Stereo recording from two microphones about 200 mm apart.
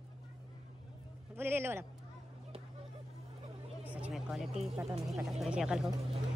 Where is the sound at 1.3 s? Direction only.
10° right (ahead or behind).